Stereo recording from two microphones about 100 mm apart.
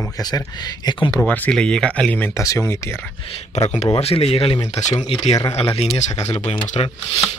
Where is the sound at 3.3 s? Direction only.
85° left.